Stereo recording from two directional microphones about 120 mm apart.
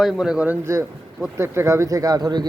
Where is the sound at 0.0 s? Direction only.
5° right (ahead or behind).